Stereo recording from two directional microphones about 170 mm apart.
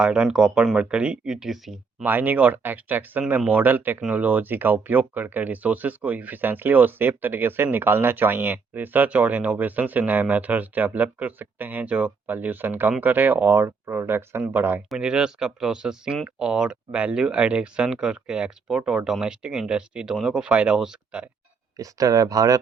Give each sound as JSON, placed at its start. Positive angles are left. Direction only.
{"t": 0.0, "sound": "speech", "side_deg": -5}
{"t": 21.8, "sound": "speech", "side_deg": -20}